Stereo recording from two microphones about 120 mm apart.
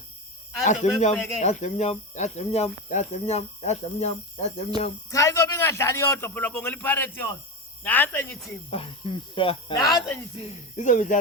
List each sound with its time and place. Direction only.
0.6 s speech: 80° left
0.9 s speech: 60° left (ahead or behind)
1.4 s speech: 75° left (ahead or behind)
5.1 s a man's voice: 25° left (ahead or behind)
8.7 s speech: 45° left (ahead or behind)
10.8 s speech: 90° left